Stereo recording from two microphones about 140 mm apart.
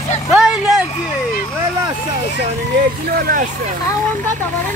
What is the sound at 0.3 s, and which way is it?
Vehicle, 5° right (ahead or behind).